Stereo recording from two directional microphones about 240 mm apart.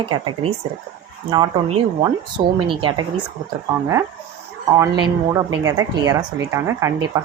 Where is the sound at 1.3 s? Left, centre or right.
Centre.